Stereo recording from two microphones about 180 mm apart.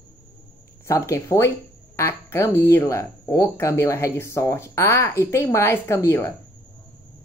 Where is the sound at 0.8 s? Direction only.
15° left (ahead or behind).